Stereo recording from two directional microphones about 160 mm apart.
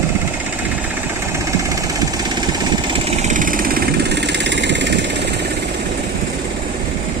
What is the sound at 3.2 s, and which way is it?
Engine, 50° right (ahead or behind).